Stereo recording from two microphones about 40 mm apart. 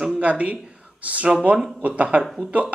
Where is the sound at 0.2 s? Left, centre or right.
Right.